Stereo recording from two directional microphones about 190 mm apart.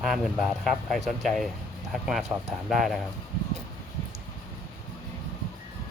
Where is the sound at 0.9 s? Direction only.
Centre (ahead or behind).